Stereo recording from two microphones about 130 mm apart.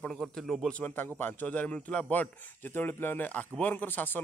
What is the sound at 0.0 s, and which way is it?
Speech, 5° left (ahead or behind).